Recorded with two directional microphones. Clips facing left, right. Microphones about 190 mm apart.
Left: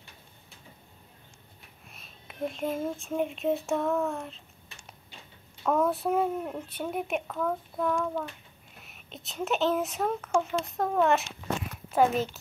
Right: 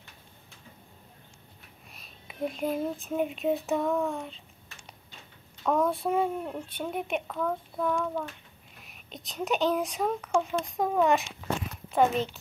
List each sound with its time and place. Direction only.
1.9 s speech: centre (ahead or behind)
5.6 s a woman's voice: 5° left (ahead or behind)